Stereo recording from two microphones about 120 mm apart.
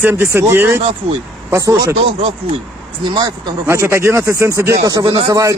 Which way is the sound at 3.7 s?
20° right (ahead or behind).